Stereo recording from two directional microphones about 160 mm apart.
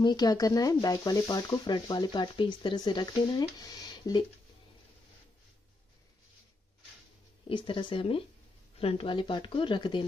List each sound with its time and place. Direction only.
0.0 s speech: 25° left (ahead or behind)
7.4 s speech: 30° left (ahead or behind)